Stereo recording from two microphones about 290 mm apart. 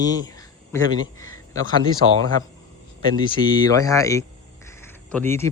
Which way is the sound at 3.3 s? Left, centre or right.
Centre.